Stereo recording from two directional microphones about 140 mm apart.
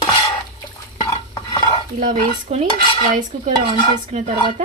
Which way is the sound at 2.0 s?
60° right (ahead or behind).